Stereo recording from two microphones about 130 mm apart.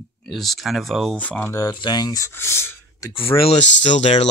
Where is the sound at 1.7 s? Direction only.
35° left (ahead or behind).